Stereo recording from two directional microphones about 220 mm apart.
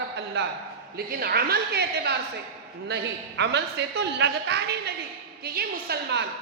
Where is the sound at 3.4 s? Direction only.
50° right (ahead or behind).